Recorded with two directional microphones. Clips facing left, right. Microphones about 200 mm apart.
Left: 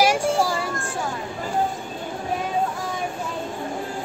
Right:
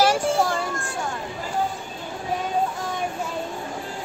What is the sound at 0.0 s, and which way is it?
Child singing, 10° left (ahead or behind).